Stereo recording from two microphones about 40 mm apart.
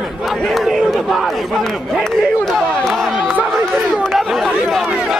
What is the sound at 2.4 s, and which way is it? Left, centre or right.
Chatter, centre.